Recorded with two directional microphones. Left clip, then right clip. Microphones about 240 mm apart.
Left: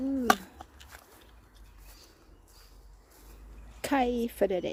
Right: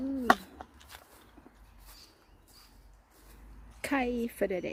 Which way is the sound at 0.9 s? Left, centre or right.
Centre.